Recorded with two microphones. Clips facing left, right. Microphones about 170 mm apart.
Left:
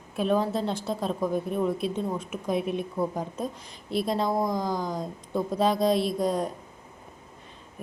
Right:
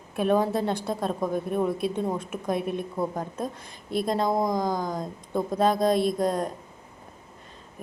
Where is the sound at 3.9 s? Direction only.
50° right (ahead or behind).